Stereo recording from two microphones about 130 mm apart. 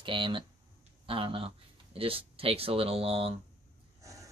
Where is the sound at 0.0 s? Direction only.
40° right (ahead or behind).